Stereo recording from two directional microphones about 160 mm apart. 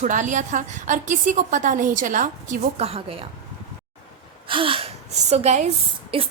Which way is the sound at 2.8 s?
40° right (ahead or behind).